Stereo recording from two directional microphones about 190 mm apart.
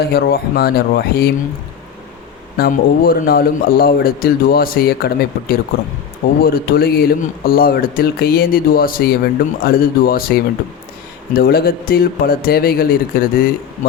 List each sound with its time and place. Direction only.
0.0 s speech: 55° left (ahead or behind)
2.6 s speech: 50° left (ahead or behind)
11.3 s speech: 55° left (ahead or behind)